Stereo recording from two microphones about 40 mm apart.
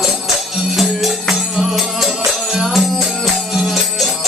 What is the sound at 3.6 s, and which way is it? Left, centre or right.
Music, centre.